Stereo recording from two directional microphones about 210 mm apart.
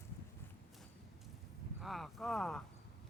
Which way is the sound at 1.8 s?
Centre (ahead or behind).